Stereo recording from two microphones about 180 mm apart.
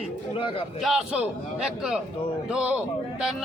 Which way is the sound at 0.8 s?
Centre (ahead or behind).